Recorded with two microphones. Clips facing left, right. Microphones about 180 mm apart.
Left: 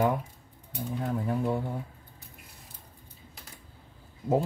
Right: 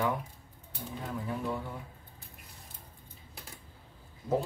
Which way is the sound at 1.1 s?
45° left (ahead or behind).